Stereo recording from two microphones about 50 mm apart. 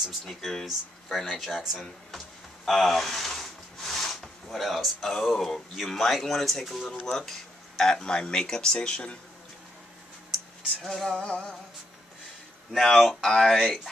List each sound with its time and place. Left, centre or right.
0.2 s speech: centre
10.8 s speech: centre
11.2 s music: left
12.7 s speech: centre